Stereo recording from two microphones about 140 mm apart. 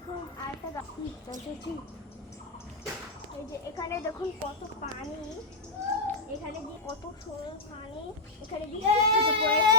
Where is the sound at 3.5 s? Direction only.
25° left (ahead or behind).